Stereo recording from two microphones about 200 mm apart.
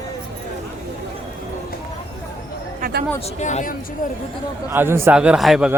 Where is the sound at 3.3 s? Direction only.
35° left (ahead or behind).